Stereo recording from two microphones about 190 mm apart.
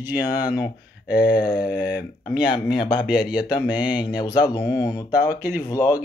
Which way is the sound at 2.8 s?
25° left (ahead or behind).